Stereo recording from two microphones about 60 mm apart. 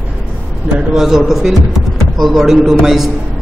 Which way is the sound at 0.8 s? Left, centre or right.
Centre.